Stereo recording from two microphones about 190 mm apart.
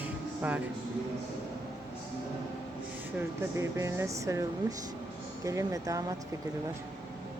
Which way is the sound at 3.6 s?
15° right (ahead or behind).